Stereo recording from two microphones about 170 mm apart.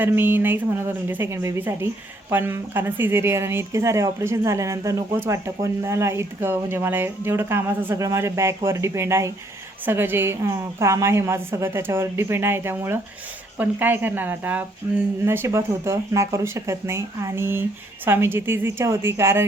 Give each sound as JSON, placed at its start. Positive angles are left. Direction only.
{"t": 0.0, "sound": "speech", "side_deg": -10}